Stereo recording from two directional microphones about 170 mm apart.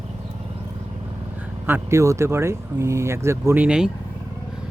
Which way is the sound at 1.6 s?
15° right (ahead or behind).